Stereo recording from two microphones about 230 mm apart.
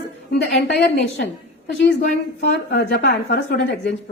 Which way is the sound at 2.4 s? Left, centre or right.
Left.